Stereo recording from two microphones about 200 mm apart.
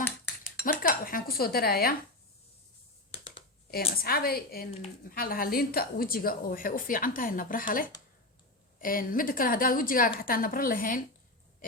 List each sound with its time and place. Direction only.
0.4 s speech: 45° left (ahead or behind)
3.1 s a sound: 25° left (ahead or behind)
3.7 s a woman's voice: 50° left (ahead or behind)